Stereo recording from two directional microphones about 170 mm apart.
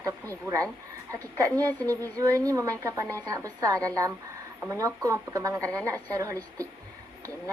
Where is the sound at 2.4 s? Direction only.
20° right (ahead or behind).